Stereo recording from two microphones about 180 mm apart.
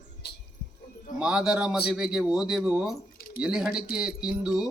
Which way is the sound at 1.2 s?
5° right (ahead or behind).